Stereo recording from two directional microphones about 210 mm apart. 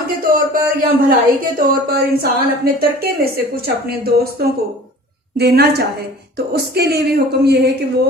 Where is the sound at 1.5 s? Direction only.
45° right (ahead or behind).